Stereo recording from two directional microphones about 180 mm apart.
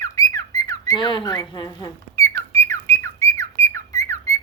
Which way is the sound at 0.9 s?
25° left (ahead or behind).